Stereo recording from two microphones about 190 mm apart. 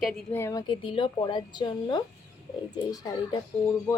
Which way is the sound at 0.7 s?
25° left (ahead or behind).